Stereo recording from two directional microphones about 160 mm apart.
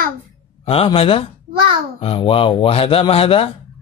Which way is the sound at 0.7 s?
35° left (ahead or behind).